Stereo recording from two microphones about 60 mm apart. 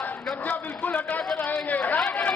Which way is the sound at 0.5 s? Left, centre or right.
Left.